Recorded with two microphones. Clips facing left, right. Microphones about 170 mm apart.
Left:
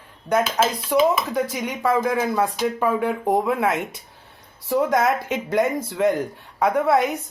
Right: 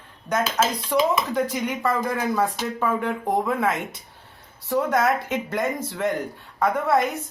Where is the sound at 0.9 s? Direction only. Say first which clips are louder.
Left 4 dB; 10° left (ahead or behind).